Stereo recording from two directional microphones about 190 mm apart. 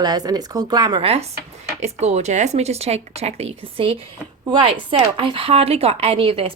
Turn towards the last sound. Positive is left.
turn(degrees=-30)  # may be behind; listen again after turning